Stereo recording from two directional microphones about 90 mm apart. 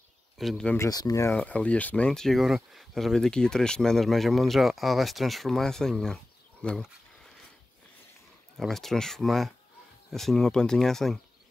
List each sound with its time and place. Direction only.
0.4 s speech: centre (ahead or behind)
0.8 s speech: 45° left (ahead or behind)
1.3 s speech: 15° left (ahead or behind)
8.5 s speech: 5° left (ahead or behind)